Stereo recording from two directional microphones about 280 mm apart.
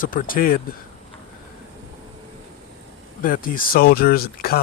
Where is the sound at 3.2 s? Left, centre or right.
Left.